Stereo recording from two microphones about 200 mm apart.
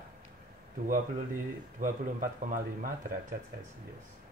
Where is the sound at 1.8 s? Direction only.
40° right (ahead or behind).